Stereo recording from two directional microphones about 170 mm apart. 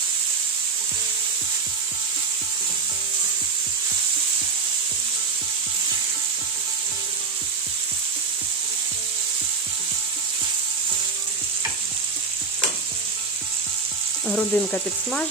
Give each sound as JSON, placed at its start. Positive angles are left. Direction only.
{"t": 14.3, "sound": "frying", "side_deg": 5}